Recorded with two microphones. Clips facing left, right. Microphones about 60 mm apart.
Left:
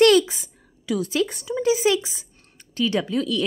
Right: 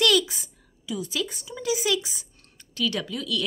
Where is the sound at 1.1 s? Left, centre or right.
Left.